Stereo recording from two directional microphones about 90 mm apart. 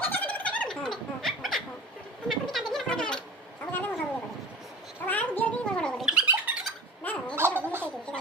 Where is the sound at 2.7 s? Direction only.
5° left (ahead or behind).